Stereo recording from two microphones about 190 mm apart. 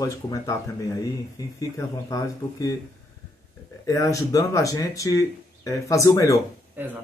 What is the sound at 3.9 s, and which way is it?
Speech, 15° left (ahead or behind).